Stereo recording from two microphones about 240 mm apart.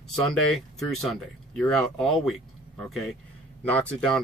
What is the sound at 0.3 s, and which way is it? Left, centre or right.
Speech, centre.